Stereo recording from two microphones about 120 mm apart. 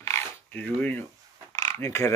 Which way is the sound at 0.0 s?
20° left (ahead or behind).